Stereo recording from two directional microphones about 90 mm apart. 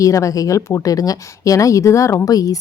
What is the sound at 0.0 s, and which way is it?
A woman's voice, 35° left (ahead or behind).